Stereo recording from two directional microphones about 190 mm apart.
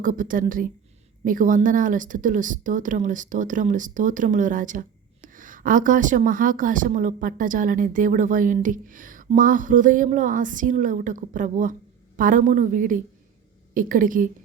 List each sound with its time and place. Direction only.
0.0 s speech: 45° right (ahead or behind)